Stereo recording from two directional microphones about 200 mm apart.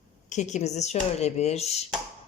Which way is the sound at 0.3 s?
35° left (ahead or behind).